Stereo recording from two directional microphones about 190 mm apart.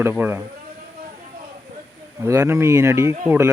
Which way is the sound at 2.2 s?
15° right (ahead or behind).